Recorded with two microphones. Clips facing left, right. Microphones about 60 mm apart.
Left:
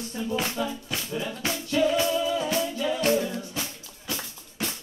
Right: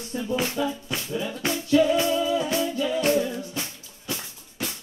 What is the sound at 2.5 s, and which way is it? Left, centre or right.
Music, centre.